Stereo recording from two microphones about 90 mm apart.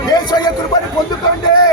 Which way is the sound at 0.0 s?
50° left (ahead or behind).